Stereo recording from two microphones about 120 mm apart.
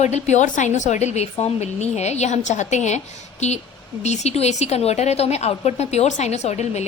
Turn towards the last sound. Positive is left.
turn(degrees=70)  # may be behind; listen again after turning